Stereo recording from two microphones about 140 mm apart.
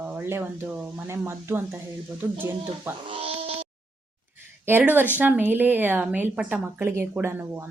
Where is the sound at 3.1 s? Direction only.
45° right (ahead or behind).